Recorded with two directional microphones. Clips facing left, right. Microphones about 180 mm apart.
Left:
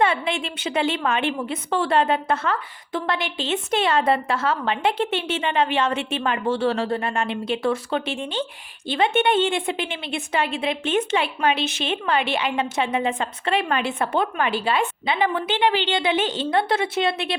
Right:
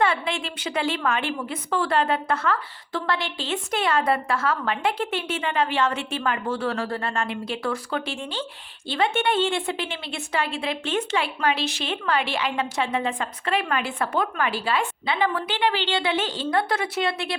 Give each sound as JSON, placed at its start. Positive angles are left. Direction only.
{"t": 0.0, "sound": "a woman's voice", "side_deg": 20}